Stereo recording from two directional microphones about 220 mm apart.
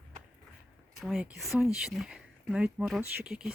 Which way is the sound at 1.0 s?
5° right (ahead or behind).